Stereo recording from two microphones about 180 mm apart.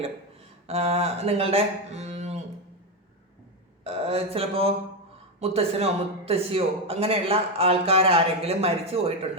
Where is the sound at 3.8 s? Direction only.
35° right (ahead or behind).